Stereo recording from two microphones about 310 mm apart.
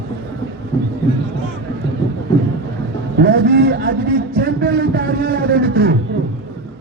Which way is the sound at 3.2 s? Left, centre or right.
Right.